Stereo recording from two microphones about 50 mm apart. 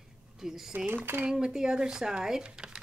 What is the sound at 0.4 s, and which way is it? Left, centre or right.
Speech, centre.